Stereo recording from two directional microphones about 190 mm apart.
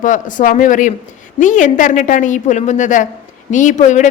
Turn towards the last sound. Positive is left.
turn(degrees=40)  # may be behind; listen again after turning